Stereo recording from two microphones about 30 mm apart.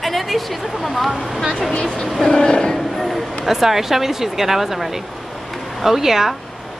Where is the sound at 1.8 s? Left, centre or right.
Left.